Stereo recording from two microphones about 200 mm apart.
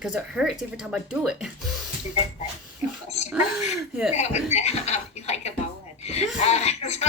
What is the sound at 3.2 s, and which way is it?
Speech, 5° right (ahead or behind).